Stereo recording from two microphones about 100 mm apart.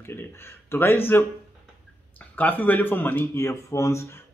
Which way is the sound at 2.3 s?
15° left (ahead or behind).